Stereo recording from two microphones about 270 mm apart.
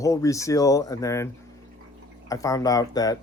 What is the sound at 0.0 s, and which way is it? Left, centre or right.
Speech, centre.